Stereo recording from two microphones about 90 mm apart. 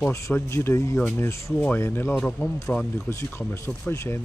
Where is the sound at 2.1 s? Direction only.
15° left (ahead or behind).